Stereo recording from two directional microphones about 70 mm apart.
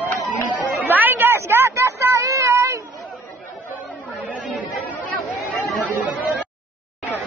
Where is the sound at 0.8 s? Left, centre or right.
Right.